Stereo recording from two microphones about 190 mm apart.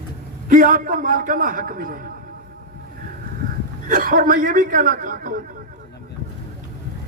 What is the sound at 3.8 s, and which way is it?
Speech, 45° right (ahead or behind).